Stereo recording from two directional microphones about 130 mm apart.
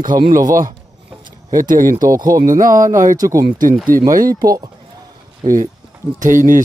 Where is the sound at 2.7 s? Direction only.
25° right (ahead or behind).